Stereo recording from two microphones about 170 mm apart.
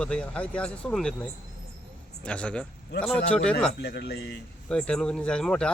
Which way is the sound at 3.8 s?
75° left (ahead or behind).